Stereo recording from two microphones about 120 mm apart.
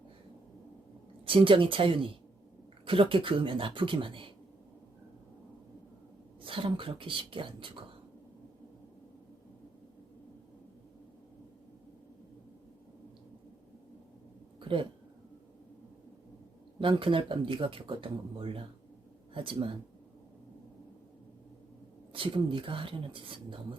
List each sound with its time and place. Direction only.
1.2 s speech: 45° right (ahead or behind)
6.4 s speech: 45° right (ahead or behind)
14.6 s a sound: 45° right (ahead or behind)
16.8 s speech: 45° right (ahead or behind)
22.1 s speech: 45° right (ahead or behind)